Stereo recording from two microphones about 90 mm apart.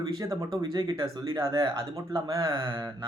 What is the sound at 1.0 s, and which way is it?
Speech, 40° right (ahead or behind).